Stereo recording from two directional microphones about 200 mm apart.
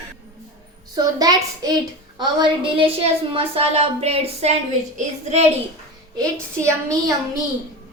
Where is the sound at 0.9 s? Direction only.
20° right (ahead or behind).